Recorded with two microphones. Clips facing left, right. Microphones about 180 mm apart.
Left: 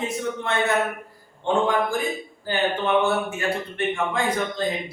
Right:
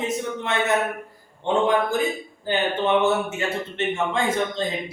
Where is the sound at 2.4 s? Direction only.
20° right (ahead or behind).